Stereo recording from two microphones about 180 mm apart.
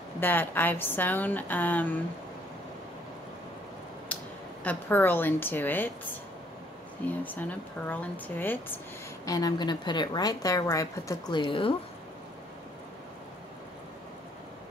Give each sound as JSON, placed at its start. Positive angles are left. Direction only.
{"t": 0.2, "sound": "a woman's voice", "side_deg": 10}
{"t": 4.1, "sound": "a sound", "side_deg": 10}
{"t": 4.6, "sound": "a woman's voice", "side_deg": 10}
{"t": 7.1, "sound": "a woman's voice", "side_deg": 10}
{"t": 9.2, "sound": "a woman's voice", "side_deg": 20}